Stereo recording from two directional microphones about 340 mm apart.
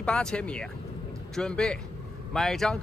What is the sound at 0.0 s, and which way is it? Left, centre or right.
Speech, centre.